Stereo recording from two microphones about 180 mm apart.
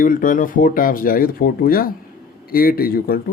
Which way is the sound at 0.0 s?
50° left (ahead or behind).